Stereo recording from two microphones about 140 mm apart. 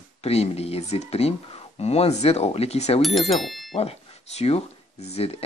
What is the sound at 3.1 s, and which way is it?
Speech, centre (ahead or behind).